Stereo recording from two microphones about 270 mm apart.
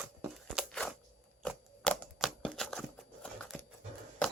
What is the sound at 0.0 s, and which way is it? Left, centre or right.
Crunch, centre.